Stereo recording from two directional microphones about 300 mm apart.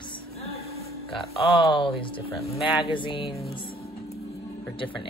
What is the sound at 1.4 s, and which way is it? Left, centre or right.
Speech, centre.